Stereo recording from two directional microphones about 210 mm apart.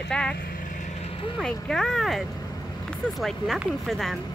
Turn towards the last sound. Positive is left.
turn(degrees=0)  # may be behind; listen again after turning